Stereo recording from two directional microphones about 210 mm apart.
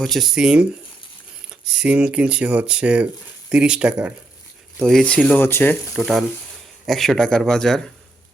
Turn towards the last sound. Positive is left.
turn(degrees=0)  # may be behind; listen again after turning